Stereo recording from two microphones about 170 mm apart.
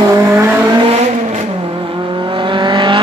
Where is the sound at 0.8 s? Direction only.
40° right (ahead or behind).